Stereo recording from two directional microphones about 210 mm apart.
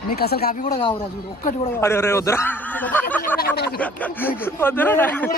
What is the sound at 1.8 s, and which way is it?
A man's voice, 10° left (ahead or behind).